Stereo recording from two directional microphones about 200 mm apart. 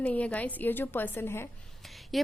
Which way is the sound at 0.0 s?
5° left (ahead or behind).